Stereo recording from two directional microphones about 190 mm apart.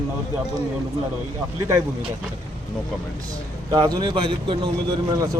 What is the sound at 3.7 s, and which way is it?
Speech, 20° right (ahead or behind).